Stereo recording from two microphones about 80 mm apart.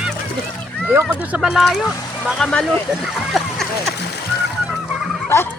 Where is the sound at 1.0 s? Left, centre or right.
Centre.